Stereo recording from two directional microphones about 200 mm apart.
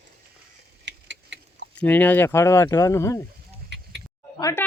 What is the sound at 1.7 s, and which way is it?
Speech, 10° left (ahead or behind).